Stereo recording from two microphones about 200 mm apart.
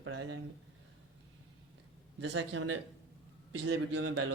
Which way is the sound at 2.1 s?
65° right (ahead or behind).